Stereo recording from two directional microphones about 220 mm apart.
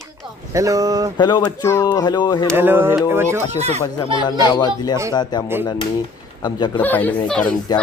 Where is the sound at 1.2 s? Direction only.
20° left (ahead or behind).